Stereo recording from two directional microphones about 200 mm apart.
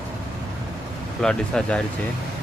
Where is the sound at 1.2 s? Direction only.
5° left (ahead or behind).